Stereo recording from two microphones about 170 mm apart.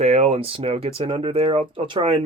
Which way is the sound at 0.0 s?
40° right (ahead or behind).